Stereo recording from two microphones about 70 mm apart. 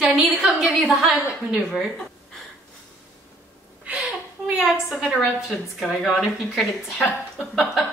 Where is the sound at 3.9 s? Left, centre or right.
Centre.